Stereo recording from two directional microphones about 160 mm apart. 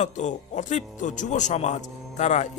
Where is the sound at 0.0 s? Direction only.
50° left (ahead or behind).